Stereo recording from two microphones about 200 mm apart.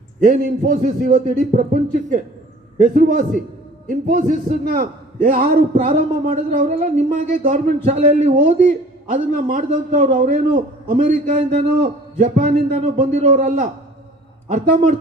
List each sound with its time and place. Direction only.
0.2 s a man's voice: 45° right (ahead or behind)